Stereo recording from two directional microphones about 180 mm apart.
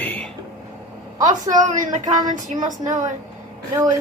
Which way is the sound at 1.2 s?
45° right (ahead or behind).